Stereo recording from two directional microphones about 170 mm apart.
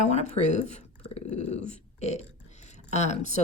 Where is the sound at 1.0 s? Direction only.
40° left (ahead or behind).